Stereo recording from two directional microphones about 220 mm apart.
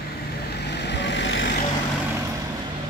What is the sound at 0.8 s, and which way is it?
Vehicle, 50° left (ahead or behind).